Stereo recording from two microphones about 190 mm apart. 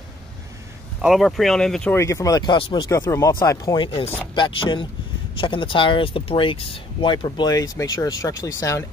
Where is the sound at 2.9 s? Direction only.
15° left (ahead or behind).